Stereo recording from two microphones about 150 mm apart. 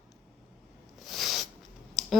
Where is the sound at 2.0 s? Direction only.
Centre (ahead or behind).